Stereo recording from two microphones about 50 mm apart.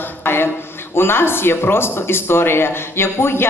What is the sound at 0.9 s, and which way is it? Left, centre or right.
Speech, left.